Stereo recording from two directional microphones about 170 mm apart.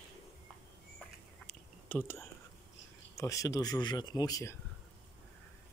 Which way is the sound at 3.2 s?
20° left (ahead or behind).